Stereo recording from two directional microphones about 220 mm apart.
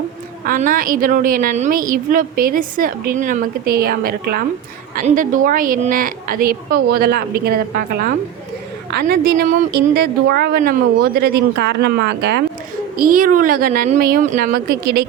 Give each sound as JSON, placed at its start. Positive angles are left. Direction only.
{"t": 0.4, "sound": "a woman's voice", "side_deg": -40}